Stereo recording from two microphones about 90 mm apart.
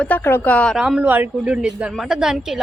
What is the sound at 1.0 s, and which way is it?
A woman's voice, 20° right (ahead or behind).